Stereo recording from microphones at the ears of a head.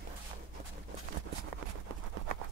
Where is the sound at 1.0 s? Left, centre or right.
Right.